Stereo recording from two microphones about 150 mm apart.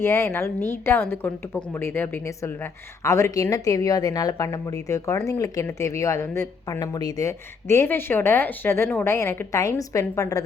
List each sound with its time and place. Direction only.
0.0 s a woman's voice: 15° left (ahead or behind)